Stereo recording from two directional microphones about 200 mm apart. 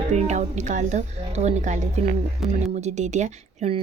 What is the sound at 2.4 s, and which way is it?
Speech, centre (ahead or behind).